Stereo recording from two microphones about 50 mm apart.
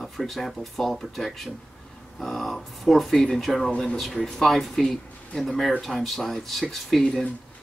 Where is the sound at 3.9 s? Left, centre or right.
Centre.